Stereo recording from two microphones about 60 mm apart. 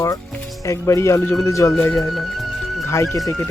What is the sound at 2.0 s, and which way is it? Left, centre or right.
Music, centre.